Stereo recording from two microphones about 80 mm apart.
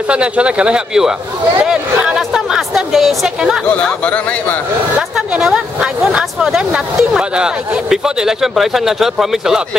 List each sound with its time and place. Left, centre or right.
0.1 s speech: centre
4.0 s speech: centre
5.4 s speech: centre